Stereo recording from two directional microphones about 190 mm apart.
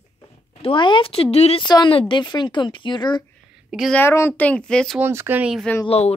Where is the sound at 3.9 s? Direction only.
15° left (ahead or behind).